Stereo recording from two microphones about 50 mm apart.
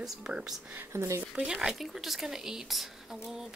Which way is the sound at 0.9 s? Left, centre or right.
Right.